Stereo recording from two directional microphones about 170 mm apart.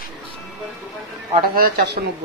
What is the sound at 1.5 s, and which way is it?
Speech, 60° right (ahead or behind).